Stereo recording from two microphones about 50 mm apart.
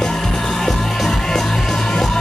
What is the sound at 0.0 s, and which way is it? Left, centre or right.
Music, centre.